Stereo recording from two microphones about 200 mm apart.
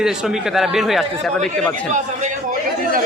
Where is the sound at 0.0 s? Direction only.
Centre (ahead or behind).